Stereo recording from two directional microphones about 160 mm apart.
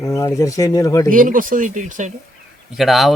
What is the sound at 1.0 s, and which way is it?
Speech, 60° right (ahead or behind).